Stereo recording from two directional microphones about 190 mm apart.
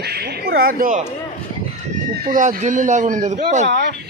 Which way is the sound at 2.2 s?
45° right (ahead or behind).